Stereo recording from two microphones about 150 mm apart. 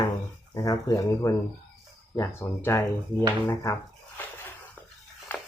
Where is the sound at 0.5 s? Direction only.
25° left (ahead or behind).